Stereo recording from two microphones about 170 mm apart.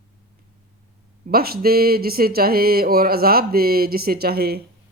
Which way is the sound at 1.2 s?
65° right (ahead or behind).